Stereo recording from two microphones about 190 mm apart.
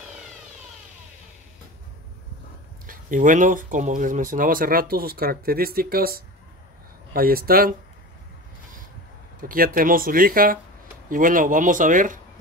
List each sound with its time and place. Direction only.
2.9 s speech: 45° right (ahead or behind)
9.4 s speech: 45° right (ahead or behind)